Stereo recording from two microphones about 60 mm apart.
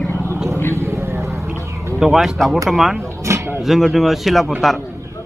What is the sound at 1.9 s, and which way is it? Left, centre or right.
Speech, centre.